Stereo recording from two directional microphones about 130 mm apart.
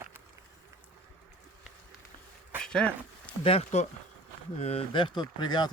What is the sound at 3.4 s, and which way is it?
Speech, 50° left (ahead or behind).